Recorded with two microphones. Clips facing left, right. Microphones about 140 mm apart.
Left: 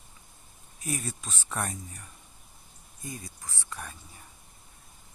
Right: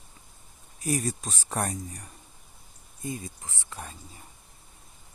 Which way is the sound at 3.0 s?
25° right (ahead or behind).